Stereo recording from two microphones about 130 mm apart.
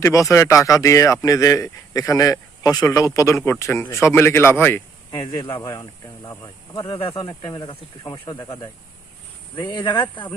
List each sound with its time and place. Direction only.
0.0 s speech: 25° left (ahead or behind)
5.1 s speech: 35° left (ahead or behind)
9.6 s speech: 35° left (ahead or behind)